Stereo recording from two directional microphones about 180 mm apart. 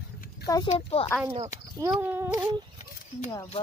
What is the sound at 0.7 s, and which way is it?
Speech, 35° left (ahead or behind).